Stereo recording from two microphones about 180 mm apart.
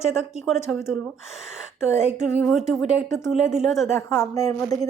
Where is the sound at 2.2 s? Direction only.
Centre (ahead or behind).